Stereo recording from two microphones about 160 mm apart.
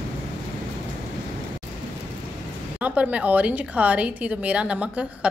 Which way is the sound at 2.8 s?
10° right (ahead or behind).